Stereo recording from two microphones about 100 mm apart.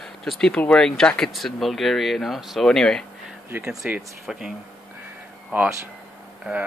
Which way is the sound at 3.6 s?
15° right (ahead or behind).